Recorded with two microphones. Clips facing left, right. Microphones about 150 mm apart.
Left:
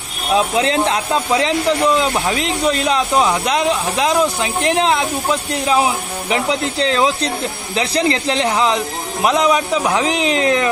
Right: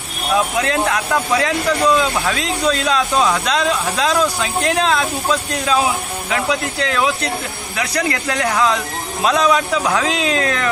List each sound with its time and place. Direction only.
0.3 s speech: 20° left (ahead or behind)